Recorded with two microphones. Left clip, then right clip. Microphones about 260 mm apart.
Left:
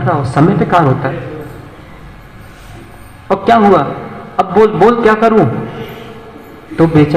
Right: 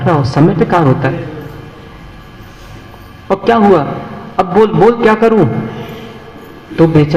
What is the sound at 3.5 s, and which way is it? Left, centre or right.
A man's voice, right.